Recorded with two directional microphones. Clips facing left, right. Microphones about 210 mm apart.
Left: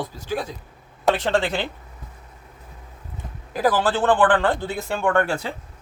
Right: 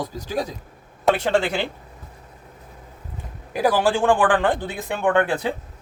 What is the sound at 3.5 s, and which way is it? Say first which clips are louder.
Speech: right 1 dB; 10° right (ahead or behind).